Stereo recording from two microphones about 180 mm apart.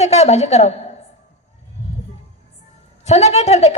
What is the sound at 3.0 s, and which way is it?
Speech, 35° left (ahead or behind).